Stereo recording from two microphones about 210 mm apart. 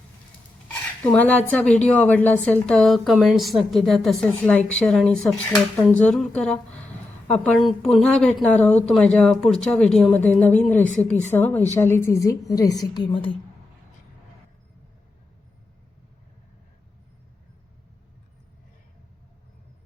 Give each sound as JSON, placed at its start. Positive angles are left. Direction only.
{"t": 0.7, "sound": "a woman's voice", "side_deg": 5}